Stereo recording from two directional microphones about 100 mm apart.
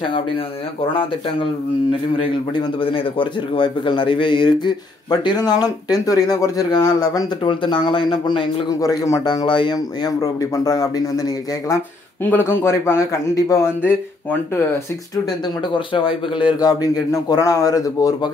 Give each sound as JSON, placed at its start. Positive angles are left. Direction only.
{"t": 0.9, "sound": "speech", "side_deg": 60}
{"t": 8.6, "sound": "speech", "side_deg": 35}
{"t": 10.2, "sound": "speech", "side_deg": 35}
{"t": 12.3, "sound": "a man's voice", "side_deg": 20}
{"t": 15.9, "sound": "speech", "side_deg": 60}
{"t": 16.5, "sound": "speech", "side_deg": 40}